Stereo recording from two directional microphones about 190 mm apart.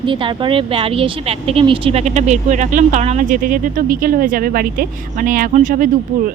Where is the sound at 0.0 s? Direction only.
25° right (ahead or behind).